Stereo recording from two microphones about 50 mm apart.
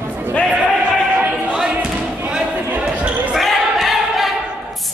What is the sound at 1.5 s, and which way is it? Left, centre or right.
Basketball bounce, centre.